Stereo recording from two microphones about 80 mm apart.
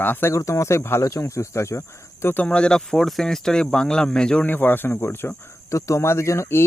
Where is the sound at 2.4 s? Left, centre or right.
Centre.